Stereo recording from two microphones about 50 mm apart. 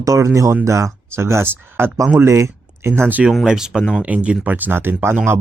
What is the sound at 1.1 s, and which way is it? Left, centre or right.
Speech, right.